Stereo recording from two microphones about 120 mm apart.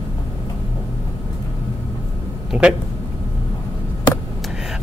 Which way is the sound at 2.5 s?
5° right (ahead or behind).